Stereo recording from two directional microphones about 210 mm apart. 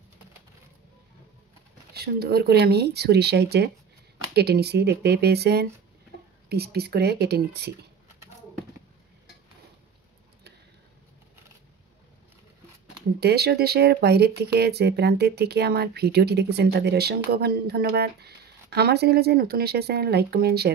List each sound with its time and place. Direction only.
2.0 s speech: 50° right (ahead or behind)
13.2 s speech: 50° right (ahead or behind)